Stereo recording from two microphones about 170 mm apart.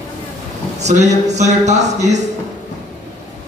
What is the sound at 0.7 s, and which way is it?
Speech, 45° right (ahead or behind).